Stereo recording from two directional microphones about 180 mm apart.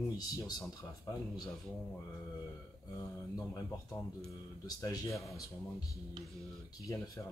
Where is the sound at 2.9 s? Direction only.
20° left (ahead or behind).